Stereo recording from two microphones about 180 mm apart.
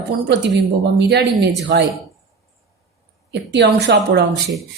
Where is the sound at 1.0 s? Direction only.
65° right (ahead or behind).